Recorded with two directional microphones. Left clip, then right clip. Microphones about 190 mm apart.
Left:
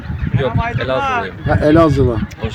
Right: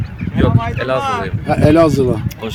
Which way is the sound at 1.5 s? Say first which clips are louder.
Even; 5° left (ahead or behind).